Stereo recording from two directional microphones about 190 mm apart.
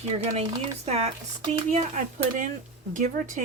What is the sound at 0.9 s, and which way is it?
Speech, 35° right (ahead or behind).